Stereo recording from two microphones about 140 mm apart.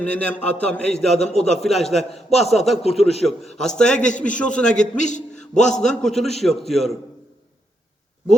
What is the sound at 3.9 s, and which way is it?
A man's voice, 60° left (ahead or behind).